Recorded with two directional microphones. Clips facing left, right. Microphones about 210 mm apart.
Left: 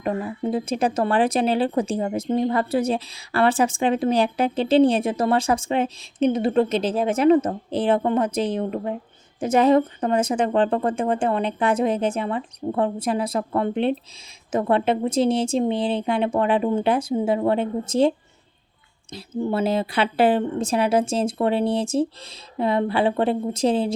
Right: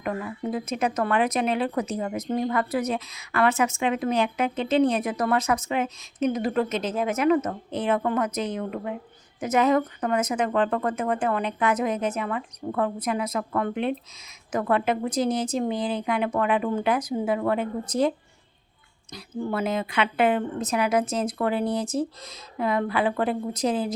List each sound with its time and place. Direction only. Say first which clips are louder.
0.0 s speech: left 4 dB; 30° left (ahead or behind)
19.1 s speech: left 4 dB; 30° left (ahead or behind)